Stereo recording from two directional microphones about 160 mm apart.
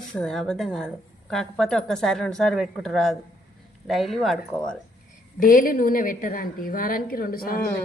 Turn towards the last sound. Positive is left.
turn(degrees=65)  # may be behind; listen again after turning